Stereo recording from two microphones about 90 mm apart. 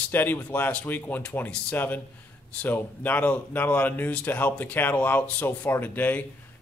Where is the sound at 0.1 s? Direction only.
25° left (ahead or behind).